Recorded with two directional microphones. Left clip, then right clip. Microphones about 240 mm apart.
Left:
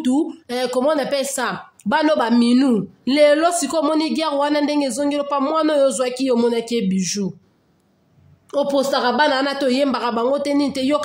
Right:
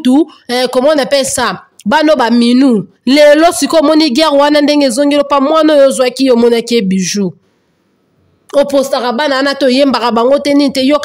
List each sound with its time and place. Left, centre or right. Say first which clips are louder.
0.0 s speech: right 10 dB; right
8.5 s speech: right 9 dB; right